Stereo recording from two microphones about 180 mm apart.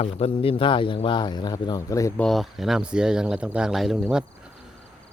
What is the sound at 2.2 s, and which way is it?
Speech, centre (ahead or behind).